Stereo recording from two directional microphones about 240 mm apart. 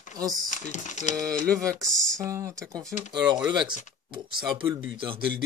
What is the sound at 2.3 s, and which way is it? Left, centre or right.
Speech, centre.